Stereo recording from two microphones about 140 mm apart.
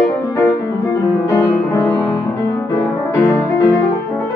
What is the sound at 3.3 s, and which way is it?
Music, 25° left (ahead or behind).